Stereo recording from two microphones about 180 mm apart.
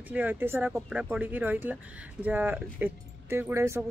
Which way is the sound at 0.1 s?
10° right (ahead or behind).